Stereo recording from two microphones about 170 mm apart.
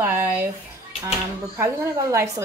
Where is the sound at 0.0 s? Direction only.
10° right (ahead or behind).